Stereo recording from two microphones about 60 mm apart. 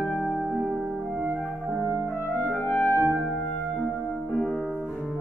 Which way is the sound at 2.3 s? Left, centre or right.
Left.